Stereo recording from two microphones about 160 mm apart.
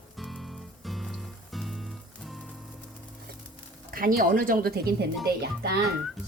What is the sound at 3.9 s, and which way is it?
A woman's voice, 65° right (ahead or behind).